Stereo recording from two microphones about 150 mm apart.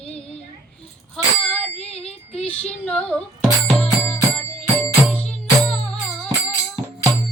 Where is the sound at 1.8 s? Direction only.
45° left (ahead or behind).